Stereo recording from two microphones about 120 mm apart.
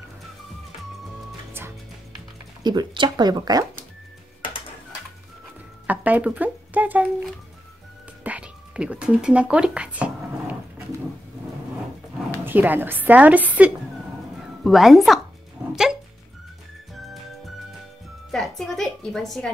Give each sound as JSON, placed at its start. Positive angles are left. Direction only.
{"t": 2.6, "sound": "speech", "side_deg": -35}
{"t": 5.9, "sound": "a sound", "side_deg": -10}
{"t": 8.2, "sound": "music", "side_deg": -10}
{"t": 12.4, "sound": "a woman's voice", "side_deg": -15}
{"t": 14.6, "sound": "a woman's voice", "side_deg": 0}
{"t": 16.9, "sound": "music", "side_deg": 0}
{"t": 18.3, "sound": "a sound", "side_deg": 0}